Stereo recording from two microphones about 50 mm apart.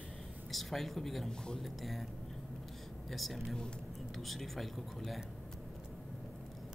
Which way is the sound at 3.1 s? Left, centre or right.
Centre.